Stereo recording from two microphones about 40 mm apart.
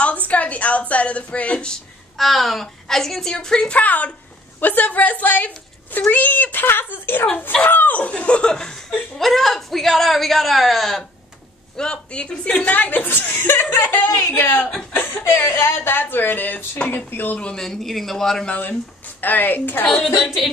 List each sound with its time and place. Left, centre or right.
0.0 s a woman's voice: left
2.1 s a woman's voice: centre
3.7 s a woman's voice: left
8.1 s speech: left
8.5 s a woman's voice: centre
9.2 s speech: centre
11.7 s speech: left
17.1 s speech: left
17.6 s a woman's voice: centre
19.2 s speech: left
20.2 s music: centre